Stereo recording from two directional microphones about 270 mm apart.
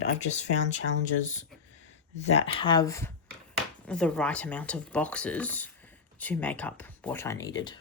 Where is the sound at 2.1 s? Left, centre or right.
Left.